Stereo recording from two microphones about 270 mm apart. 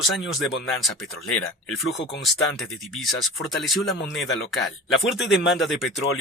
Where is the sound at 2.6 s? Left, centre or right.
Centre.